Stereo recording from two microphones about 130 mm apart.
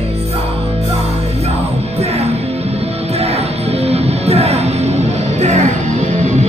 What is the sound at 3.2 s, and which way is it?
Music, 50° right (ahead or behind).